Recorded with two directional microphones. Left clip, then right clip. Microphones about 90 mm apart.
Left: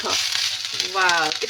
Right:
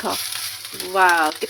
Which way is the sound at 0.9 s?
35° right (ahead or behind).